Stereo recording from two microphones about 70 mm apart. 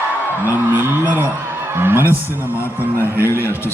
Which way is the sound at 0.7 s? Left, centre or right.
Right.